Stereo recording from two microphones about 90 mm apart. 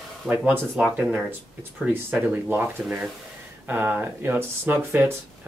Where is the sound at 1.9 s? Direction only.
25° right (ahead or behind).